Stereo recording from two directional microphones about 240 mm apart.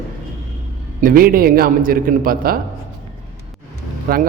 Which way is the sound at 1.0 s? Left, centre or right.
Right.